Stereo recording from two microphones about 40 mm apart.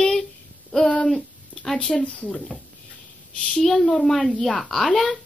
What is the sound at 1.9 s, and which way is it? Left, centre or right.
Speech, left.